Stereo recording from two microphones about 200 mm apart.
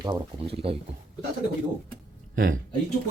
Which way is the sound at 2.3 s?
45° right (ahead or behind).